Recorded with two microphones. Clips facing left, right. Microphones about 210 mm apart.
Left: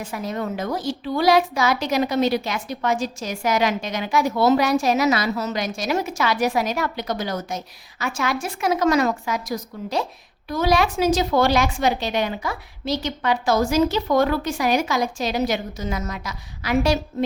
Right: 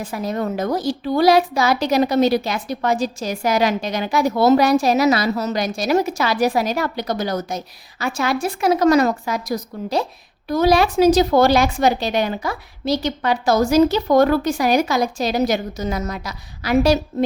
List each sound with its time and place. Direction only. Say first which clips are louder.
0.0 s a woman's voice: right 4 dB; 35° right (ahead or behind)